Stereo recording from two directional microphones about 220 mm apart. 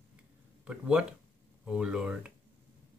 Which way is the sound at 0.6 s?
5° right (ahead or behind).